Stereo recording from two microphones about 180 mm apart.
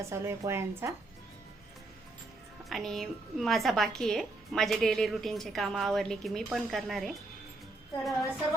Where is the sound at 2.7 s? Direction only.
Centre (ahead or behind).